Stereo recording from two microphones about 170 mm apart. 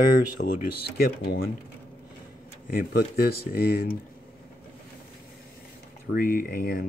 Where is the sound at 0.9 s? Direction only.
65° left (ahead or behind).